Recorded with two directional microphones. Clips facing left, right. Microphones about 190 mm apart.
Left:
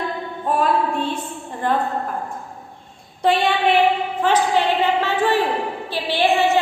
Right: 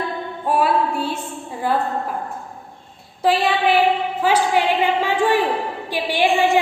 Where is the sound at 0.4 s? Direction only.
10° right (ahead or behind).